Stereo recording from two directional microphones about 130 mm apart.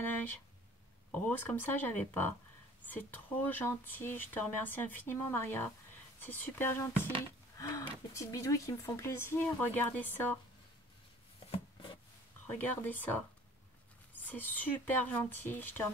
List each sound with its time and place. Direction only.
1.1 s speech: 10° left (ahead or behind)
11.5 s a sound: 40° left (ahead or behind)
12.4 s speech: 15° left (ahead or behind)